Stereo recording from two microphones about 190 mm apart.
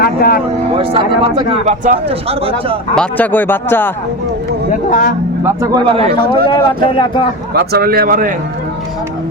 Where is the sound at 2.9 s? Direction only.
5° left (ahead or behind).